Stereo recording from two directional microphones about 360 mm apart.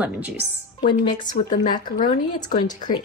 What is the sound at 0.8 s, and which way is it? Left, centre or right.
Speech, centre.